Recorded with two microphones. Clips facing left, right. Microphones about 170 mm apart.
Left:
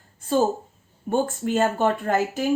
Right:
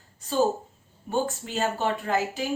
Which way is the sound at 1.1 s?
50° left (ahead or behind).